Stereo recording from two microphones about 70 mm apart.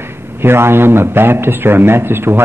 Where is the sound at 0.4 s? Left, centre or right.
Right.